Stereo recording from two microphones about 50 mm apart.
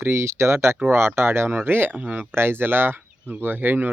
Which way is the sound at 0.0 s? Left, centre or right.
Right.